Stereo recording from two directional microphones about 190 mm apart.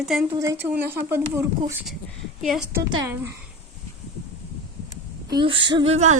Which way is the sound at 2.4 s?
Centre (ahead or behind).